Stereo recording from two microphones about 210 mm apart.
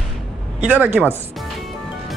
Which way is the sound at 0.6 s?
10° right (ahead or behind).